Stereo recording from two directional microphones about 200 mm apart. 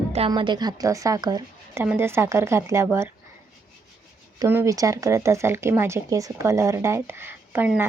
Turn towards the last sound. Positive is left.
turn(degrees=-10)  # may be behind; listen again after turning